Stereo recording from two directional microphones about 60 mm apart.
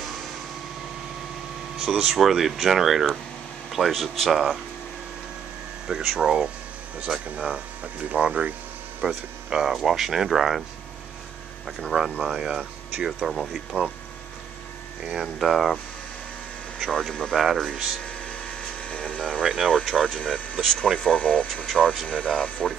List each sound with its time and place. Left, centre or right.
1.8 s speech: centre
5.9 s speech: centre
11.6 s speech: centre
15.2 s speech: centre
18.8 s a sound: centre
19.4 s speech: centre
20.2 s speech: centre
20.6 s speech: centre
21.0 s speech: centre